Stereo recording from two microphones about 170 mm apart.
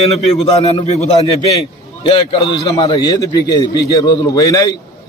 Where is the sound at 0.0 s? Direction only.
40° left (ahead or behind).